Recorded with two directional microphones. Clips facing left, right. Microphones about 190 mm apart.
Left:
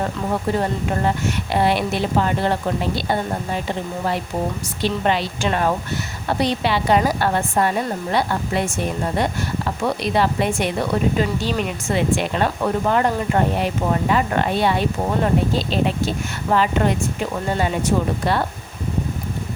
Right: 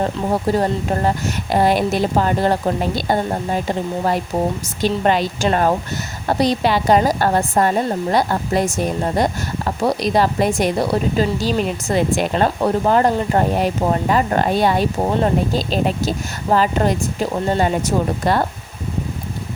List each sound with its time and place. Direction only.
0.0 s speech: 35° right (ahead or behind)